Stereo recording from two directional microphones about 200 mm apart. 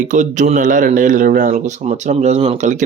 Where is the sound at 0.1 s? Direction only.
35° right (ahead or behind).